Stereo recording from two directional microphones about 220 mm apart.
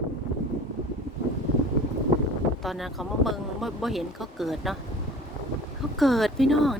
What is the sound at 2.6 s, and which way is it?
Speech, centre (ahead or behind).